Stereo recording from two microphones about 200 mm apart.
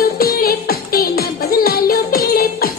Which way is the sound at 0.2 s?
50° left (ahead or behind).